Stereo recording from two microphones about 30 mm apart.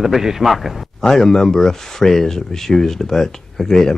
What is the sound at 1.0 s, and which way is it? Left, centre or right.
Speech, centre.